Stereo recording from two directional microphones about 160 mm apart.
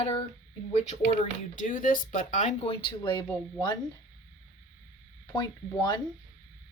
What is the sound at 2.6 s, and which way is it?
Speech, 35° left (ahead or behind).